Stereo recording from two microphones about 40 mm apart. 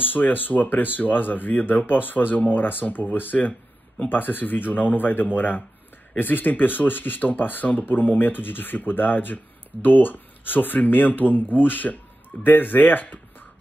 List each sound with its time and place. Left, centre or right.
0.0 s speech: left